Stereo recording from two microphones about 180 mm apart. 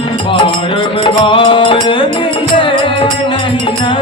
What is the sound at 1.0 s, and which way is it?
Music, 25° left (ahead or behind).